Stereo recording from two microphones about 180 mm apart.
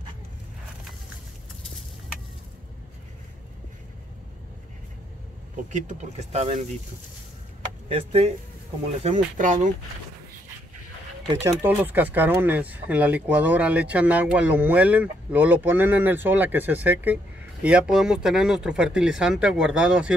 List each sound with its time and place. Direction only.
5.7 s speech: 40° right (ahead or behind)
7.9 s speech: 35° right (ahead or behind)
9.0 s speech: 45° right (ahead or behind)
11.4 s speech: 10° right (ahead or behind)